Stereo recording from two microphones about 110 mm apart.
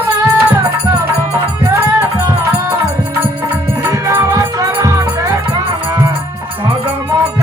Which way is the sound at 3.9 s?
30° right (ahead or behind).